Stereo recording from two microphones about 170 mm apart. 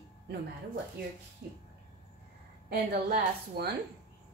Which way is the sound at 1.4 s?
70° right (ahead or behind).